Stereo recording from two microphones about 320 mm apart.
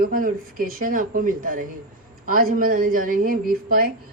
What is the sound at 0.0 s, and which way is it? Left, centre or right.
Speech, right.